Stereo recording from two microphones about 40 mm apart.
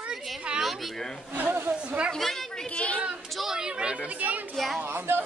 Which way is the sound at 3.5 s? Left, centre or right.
Right.